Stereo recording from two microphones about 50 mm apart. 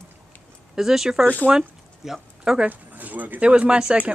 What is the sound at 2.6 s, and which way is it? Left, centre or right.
Speech, right.